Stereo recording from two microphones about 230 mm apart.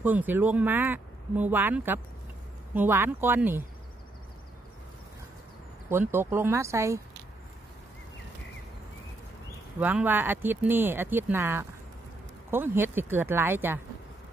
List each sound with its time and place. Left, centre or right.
0.0 s speech: centre
5.9 s speech: centre
9.8 s speech: centre